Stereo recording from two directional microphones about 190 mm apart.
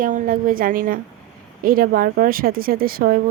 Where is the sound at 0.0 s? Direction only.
45° right (ahead or behind).